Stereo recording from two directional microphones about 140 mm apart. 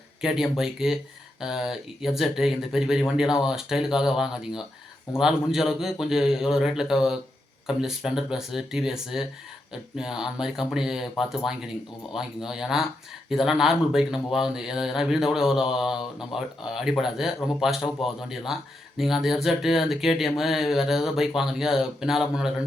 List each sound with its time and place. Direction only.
0.2 s speech: 5° right (ahead or behind)